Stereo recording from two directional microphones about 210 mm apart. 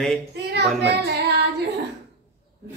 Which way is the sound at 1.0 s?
50° right (ahead or behind).